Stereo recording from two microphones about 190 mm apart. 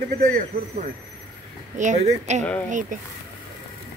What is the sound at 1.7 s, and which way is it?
Speech, 40° right (ahead or behind).